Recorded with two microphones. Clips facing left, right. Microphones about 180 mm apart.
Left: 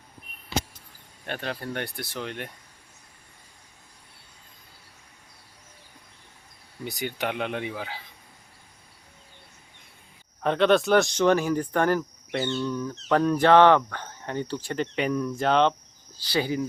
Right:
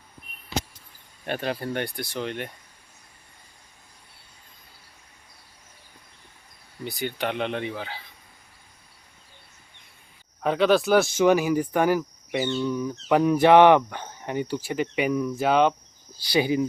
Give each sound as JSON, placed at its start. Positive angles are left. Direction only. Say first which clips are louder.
{"t": 1.2, "sound": "speech", "louder": "right 4 dB", "side_deg": -10}
{"t": 6.8, "sound": "speech", "louder": "right 1 dB", "side_deg": 15}
{"t": 10.4, "sound": "speech", "louder": "even", "side_deg": -5}